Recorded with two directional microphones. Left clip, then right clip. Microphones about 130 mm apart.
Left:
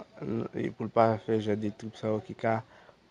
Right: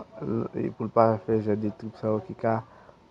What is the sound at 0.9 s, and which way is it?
Speech, 50° left (ahead or behind).